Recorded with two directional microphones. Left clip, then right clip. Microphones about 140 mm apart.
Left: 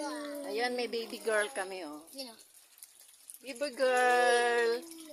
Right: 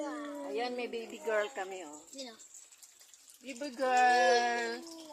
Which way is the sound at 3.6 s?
55° left (ahead or behind).